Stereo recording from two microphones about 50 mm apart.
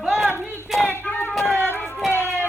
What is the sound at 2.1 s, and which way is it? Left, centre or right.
Music, left.